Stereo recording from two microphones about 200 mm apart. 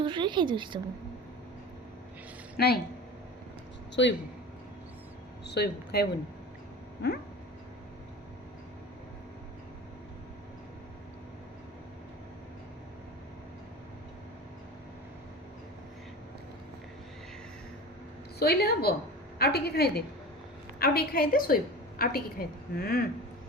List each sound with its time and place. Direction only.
0.0 s a woman's voice: 25° right (ahead or behind)
2.6 s a woman's voice: 55° left (ahead or behind)
4.0 s speech: 65° left (ahead or behind)
5.5 s speech: 55° left (ahead or behind)
18.3 s a woman's voice: 50° left (ahead or behind)